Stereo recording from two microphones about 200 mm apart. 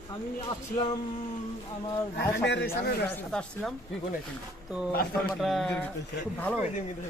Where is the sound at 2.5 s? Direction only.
55° left (ahead or behind).